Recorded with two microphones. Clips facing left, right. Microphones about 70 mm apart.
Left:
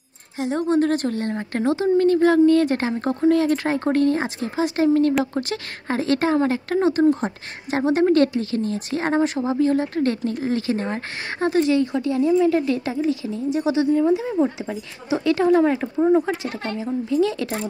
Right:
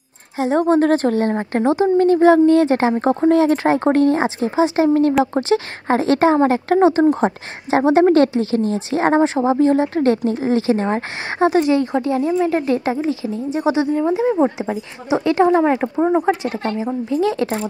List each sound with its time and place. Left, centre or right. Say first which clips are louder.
0.4 s speech: right 5 dB; right; by 4.8 s centre
4.8 s speech: right 3 dB; right
11.8 s speech: right 2 dB; right